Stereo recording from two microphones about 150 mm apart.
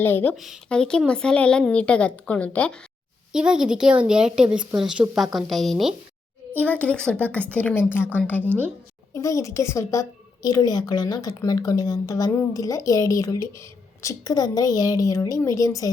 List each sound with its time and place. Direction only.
0.0 s a woman's voice: 15° left (ahead or behind)
0.3 s a woman's voice: centre (ahead or behind)
3.3 s a woman's voice: 5° right (ahead or behind); by 8.4 s 10° left (ahead or behind)
8.4 s a woman's voice: 15° right (ahead or behind)
9.1 s a woman's voice: 20° left (ahead or behind)